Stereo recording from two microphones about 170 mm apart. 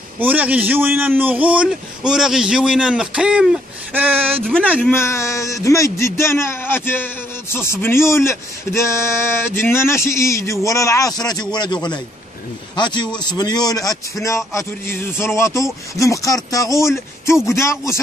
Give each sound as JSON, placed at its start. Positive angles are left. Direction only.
{"t": 0.2, "sound": "a man's voice", "side_deg": -10}
{"t": 4.5, "sound": "a man's voice", "side_deg": 5}
{"t": 4.9, "sound": "a man's voice", "side_deg": 15}